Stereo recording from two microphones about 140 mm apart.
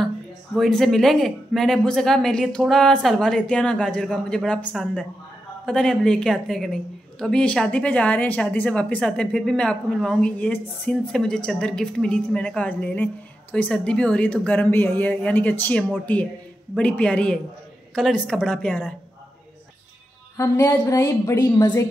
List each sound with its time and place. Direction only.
0.6 s a woman's voice: 5° left (ahead or behind)
20.3 s a woman's voice: 20° left (ahead or behind)